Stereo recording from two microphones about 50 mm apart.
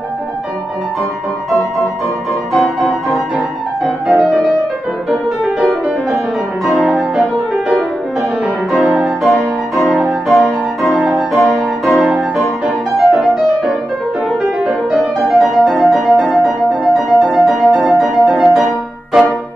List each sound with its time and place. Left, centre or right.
2.5 s music: centre
6.7 s music: centre
9.2 s music: centre
12.6 s music: centre
13.3 s music: centre